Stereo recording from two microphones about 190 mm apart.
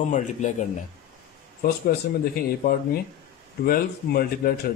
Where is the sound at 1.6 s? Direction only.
50° left (ahead or behind).